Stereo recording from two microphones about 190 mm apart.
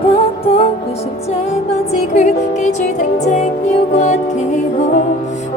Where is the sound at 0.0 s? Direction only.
30° left (ahead or behind).